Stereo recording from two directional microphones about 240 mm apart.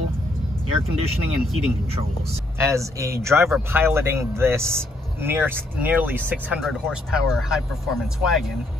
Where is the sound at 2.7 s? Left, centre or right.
Centre.